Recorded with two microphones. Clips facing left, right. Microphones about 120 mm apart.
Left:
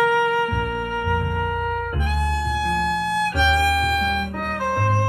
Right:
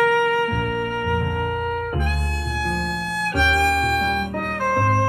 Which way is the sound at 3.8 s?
45° right (ahead or behind).